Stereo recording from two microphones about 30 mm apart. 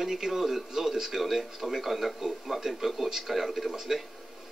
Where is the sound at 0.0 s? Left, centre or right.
Centre.